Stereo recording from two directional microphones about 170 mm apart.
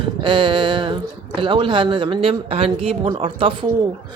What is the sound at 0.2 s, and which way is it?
Speech, 30° right (ahead or behind).